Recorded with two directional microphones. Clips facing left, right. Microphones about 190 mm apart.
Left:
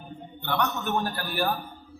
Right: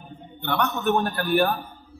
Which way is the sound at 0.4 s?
60° right (ahead or behind).